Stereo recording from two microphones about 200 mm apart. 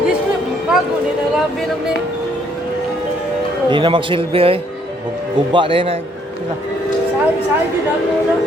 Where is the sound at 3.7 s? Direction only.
25° right (ahead or behind).